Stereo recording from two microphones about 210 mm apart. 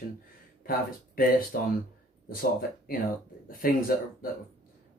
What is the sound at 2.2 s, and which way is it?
Speech, 45° left (ahead or behind).